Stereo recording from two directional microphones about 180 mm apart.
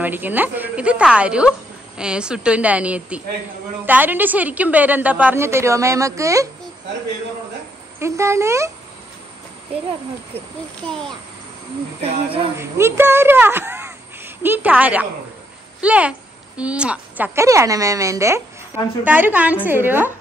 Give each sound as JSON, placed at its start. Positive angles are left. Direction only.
{"t": 0.0, "sound": "a woman's voice", "side_deg": -10}
{"t": 8.0, "sound": "a woman's voice", "side_deg": -15}
{"t": 12.0, "sound": "speech", "side_deg": -30}
{"t": 12.5, "sound": "a woman's voice", "side_deg": -15}